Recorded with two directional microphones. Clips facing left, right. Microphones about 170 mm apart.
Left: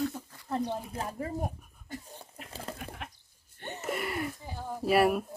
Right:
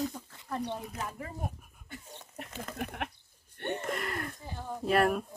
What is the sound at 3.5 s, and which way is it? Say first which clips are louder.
Wheeze: right 7 dB; 65° right (ahead or behind).